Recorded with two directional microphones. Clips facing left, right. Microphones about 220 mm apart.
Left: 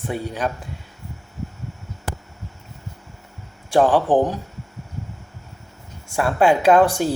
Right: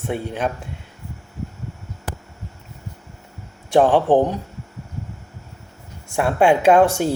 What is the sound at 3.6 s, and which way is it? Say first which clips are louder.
Speech: right 2 dB; 25° right (ahead or behind).